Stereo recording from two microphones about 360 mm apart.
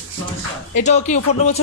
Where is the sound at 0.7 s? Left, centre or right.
Centre.